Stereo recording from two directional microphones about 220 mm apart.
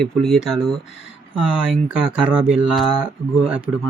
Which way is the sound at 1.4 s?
5° right (ahead or behind).